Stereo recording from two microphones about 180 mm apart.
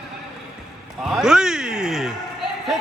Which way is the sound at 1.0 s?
Centre (ahead or behind).